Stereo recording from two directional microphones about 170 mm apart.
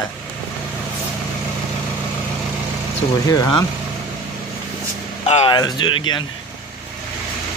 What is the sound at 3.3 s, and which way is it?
Speech, 25° left (ahead or behind).